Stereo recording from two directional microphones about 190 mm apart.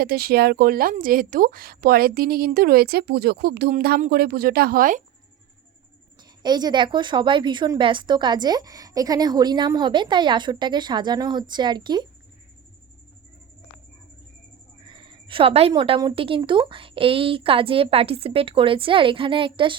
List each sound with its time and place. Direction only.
0.0 s a woman's voice: 55° right (ahead or behind)
6.4 s speech: 20° right (ahead or behind)
14.8 s a woman's voice: 25° right (ahead or behind)